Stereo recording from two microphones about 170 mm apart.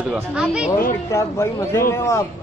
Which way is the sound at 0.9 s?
15° left (ahead or behind).